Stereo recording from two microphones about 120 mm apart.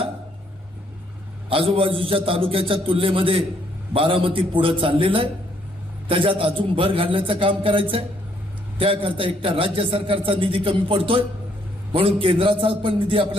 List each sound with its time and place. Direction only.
1.5 s a man's voice: 50° right (ahead or behind)